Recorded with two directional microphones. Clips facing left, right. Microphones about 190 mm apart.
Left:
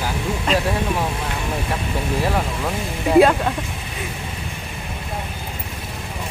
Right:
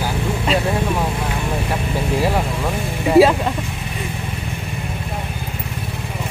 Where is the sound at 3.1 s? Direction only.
5° right (ahead or behind).